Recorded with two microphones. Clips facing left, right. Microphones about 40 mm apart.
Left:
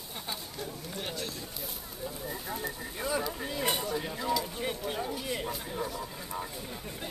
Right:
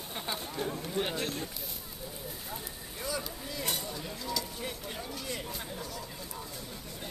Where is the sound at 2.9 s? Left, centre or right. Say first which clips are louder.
Left 4 dB; left.